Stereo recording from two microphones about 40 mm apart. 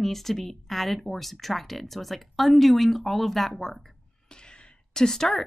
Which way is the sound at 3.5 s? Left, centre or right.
Centre.